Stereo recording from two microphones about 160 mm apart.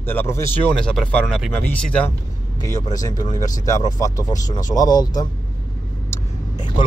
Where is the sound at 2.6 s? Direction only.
25° left (ahead or behind).